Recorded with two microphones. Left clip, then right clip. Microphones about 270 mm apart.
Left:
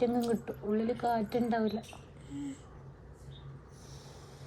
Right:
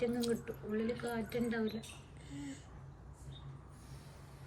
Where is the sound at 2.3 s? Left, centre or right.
Centre.